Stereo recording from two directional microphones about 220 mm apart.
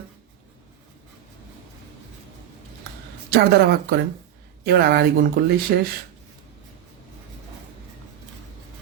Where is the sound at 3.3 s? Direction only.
45° right (ahead or behind).